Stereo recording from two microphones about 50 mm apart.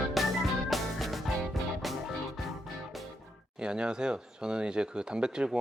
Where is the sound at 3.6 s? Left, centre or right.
Centre.